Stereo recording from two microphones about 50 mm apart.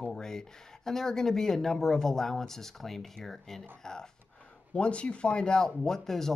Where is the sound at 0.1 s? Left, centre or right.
Centre.